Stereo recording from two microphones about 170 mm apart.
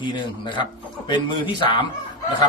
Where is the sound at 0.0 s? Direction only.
30° left (ahead or behind).